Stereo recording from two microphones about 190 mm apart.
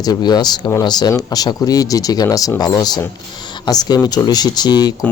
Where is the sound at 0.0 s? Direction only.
20° left (ahead or behind).